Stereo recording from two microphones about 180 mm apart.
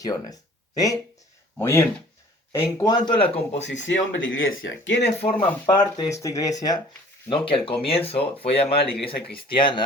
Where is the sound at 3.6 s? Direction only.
90° left.